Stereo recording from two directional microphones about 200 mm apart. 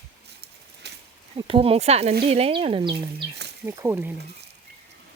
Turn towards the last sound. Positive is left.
turn(degrees=-15)  # may be behind; listen again after turning